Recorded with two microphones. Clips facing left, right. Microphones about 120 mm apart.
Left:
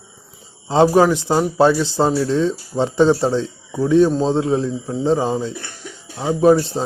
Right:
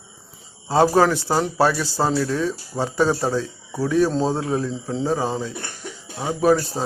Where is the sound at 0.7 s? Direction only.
20° left (ahead or behind).